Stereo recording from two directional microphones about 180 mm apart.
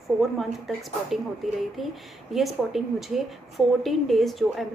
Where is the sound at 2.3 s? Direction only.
Centre (ahead or behind).